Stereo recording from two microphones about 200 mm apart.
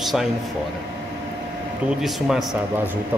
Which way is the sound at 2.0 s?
Centre (ahead or behind).